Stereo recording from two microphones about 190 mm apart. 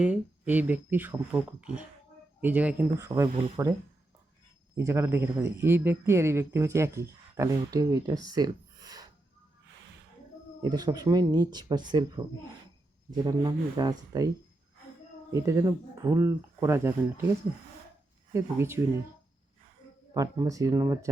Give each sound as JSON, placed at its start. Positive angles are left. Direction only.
{"t": 0.0, "sound": "speech", "side_deg": -5}
{"t": 4.7, "sound": "speech", "side_deg": -15}
{"t": 10.6, "sound": "speech", "side_deg": -20}
{"t": 13.2, "sound": "speech", "side_deg": -20}
{"t": 15.3, "sound": "speech", "side_deg": -15}
{"t": 18.3, "sound": "speech", "side_deg": -15}
{"t": 20.1, "sound": "speech", "side_deg": -20}